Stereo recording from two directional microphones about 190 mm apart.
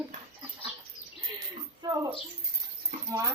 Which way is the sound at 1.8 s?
20° right (ahead or behind).